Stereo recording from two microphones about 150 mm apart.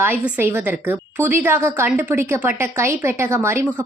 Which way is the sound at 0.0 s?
15° right (ahead or behind).